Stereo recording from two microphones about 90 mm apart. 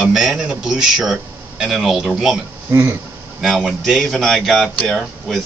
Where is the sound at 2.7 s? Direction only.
30° right (ahead or behind).